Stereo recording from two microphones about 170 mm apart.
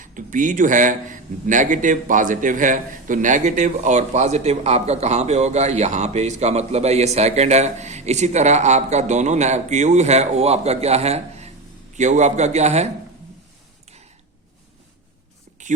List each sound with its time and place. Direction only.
0.0 s a man's voice: 50° right (ahead or behind)